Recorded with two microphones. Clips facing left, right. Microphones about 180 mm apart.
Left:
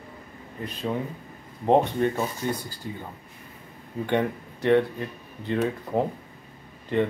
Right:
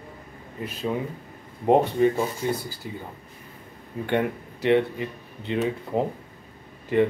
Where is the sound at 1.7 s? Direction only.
5° right (ahead or behind).